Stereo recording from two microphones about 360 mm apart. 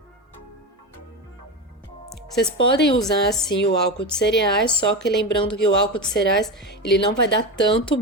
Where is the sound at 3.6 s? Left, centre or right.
Left.